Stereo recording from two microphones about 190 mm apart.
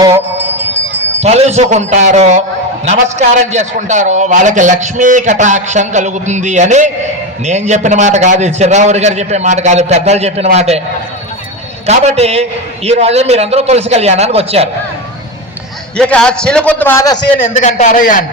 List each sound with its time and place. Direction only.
1.2 s a man's voice: 35° right (ahead or behind)
11.9 s a man's voice: 35° right (ahead or behind)
16.0 s a man's voice: 5° left (ahead or behind)
17.5 s a man's voice: 40° left (ahead or behind)